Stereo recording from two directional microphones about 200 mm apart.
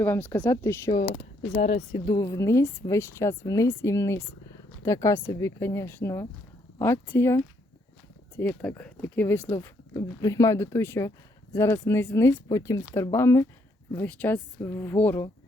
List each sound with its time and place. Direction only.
0.0 s speech: 10° left (ahead or behind)
1.5 s speech: 35° left (ahead or behind)
1.9 s speech: 20° left (ahead or behind)